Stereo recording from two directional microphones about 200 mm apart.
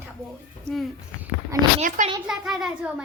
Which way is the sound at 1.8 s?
40° right (ahead or behind).